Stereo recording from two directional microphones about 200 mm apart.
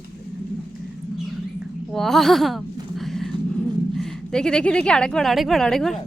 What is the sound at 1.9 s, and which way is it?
A woman's voice, centre (ahead or behind).